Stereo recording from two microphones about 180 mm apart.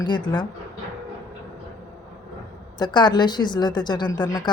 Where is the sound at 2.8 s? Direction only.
25° left (ahead or behind).